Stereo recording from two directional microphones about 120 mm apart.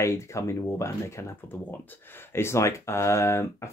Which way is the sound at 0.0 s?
25° left (ahead or behind).